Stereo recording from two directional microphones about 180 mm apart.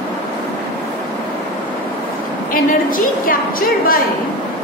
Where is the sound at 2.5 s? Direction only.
50° left (ahead or behind).